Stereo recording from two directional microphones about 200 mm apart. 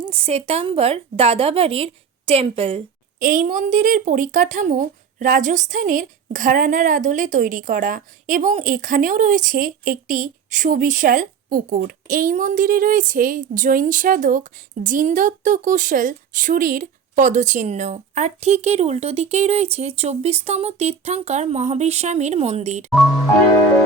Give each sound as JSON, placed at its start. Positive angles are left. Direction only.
{"t": 0.0, "sound": "a woman's voice", "side_deg": -30}
{"t": 3.2, "sound": "speech", "side_deg": -40}